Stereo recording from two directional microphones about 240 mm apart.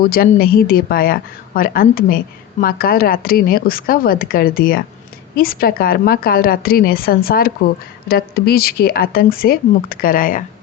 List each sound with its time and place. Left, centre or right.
0.0 s a woman's voice: left